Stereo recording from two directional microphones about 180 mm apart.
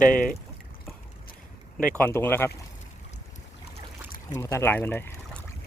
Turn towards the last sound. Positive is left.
turn(degrees=10)  # may be behind; listen again after turning